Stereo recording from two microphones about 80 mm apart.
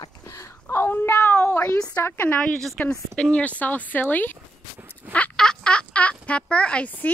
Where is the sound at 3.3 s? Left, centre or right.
Centre.